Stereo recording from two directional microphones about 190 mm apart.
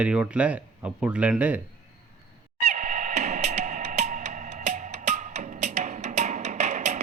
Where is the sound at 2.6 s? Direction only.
35° right (ahead or behind).